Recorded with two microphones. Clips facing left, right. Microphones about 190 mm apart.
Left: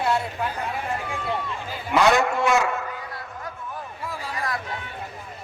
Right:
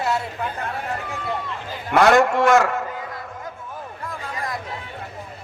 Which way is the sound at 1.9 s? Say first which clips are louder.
Right 3 dB; 55° right (ahead or behind).